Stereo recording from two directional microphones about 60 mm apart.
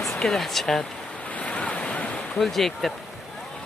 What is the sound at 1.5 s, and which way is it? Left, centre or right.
Waves, left.